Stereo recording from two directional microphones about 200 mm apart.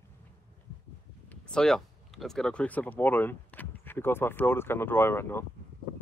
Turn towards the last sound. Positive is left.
turn(degrees=10)  # may be behind; listen again after turning